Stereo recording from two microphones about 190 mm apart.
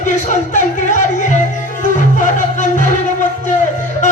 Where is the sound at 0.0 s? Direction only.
40° left (ahead or behind).